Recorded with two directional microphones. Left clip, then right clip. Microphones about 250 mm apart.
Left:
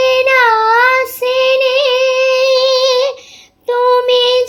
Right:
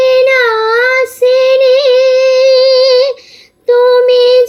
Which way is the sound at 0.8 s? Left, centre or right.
Left.